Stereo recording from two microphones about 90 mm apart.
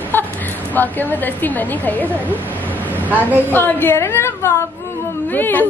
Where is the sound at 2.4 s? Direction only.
20° left (ahead or behind).